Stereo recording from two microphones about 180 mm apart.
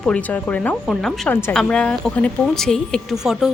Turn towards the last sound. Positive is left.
turn(degrees=-5)  # may be behind; listen again after turning